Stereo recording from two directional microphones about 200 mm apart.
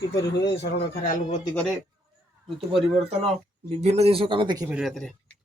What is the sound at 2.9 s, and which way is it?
Speech, 35° right (ahead or behind).